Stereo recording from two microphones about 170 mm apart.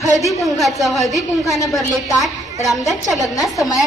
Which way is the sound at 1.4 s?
20° left (ahead or behind).